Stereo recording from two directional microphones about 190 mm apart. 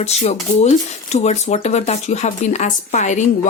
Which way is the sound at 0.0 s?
35° left (ahead or behind).